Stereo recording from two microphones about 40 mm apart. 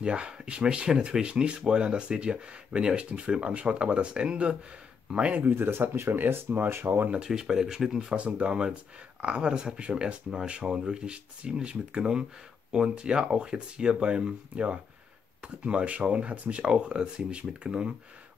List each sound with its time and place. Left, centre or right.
0.0 s speech: right
5.5 s speech: right
7.2 s speech: centre
8.2 s speech: right
14.5 s speech: right
16.7 s speech: right